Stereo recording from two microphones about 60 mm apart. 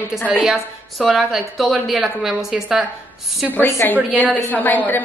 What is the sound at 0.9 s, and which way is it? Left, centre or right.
A woman's voice, centre.